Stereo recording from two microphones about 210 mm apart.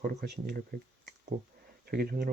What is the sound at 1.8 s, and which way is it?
Speech, 45° right (ahead or behind).